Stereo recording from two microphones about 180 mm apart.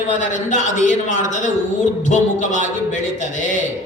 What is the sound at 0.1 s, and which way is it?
Speech, 45° left (ahead or behind).